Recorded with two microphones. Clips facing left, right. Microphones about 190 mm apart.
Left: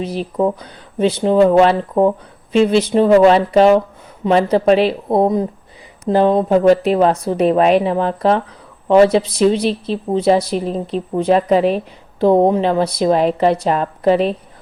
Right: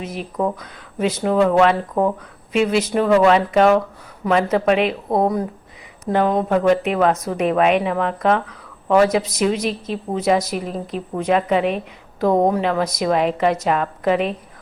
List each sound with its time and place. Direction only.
0.0 s a woman's voice: 30° left (ahead or behind)